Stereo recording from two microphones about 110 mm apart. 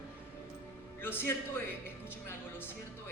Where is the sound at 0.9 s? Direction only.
20° left (ahead or behind).